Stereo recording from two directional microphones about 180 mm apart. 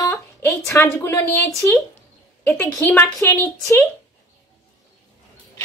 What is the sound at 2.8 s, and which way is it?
Speech, 10° left (ahead or behind).